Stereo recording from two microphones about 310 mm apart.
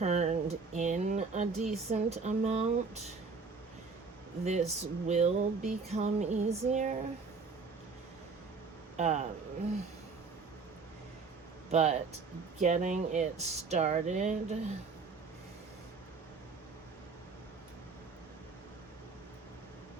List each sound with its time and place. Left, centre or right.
0.0 s speech: right
4.4 s speech: right
9.0 s speech: right
11.7 s speech: right